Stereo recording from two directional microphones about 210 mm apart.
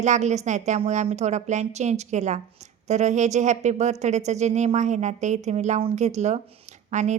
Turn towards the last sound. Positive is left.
turn(degrees=-35)  # may be behind; listen again after turning